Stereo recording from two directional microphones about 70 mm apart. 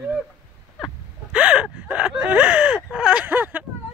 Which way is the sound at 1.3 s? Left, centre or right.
Centre.